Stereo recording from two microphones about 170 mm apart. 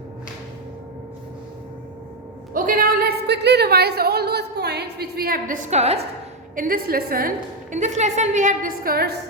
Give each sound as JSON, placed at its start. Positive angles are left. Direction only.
{"t": 2.5, "sound": "speech", "side_deg": -55}
{"t": 6.6, "sound": "a woman's voice", "side_deg": -60}